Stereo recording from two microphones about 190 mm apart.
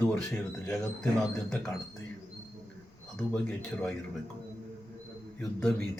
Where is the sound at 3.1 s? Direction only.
5° left (ahead or behind).